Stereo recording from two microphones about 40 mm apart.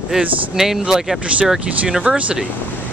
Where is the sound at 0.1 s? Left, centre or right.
Centre.